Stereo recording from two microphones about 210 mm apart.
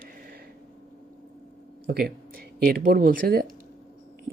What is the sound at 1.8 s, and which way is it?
Speech, 50° right (ahead or behind).